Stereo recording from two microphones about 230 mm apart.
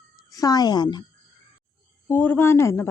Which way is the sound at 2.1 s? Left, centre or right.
Centre.